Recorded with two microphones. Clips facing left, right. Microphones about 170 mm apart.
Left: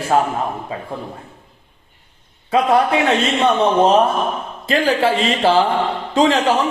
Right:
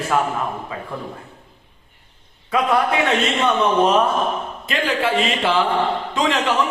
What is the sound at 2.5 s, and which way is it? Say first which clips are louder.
A man's voice: left 4 dB; 30° left (ahead or behind).